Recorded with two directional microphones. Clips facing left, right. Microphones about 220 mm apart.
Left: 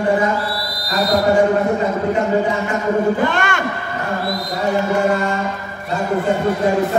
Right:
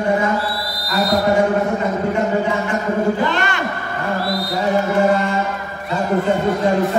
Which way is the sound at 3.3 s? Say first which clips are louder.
Left 1 dB; 50° left (ahead or behind).